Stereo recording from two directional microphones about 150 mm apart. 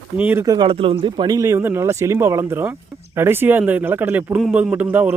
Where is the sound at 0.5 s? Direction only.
35° right (ahead or behind).